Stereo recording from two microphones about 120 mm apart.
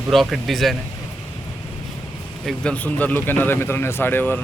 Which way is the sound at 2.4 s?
10° left (ahead or behind).